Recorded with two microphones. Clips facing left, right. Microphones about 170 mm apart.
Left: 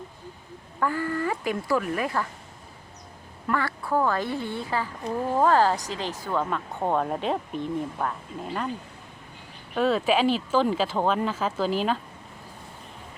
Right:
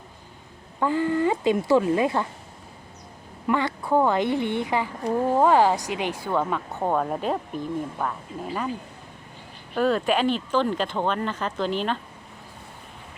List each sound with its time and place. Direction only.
0.8 s a woman's voice: 20° right (ahead or behind)
3.4 s a woman's voice: 20° right (ahead or behind); by 8.7 s centre (ahead or behind)
9.7 s speech: centre (ahead or behind)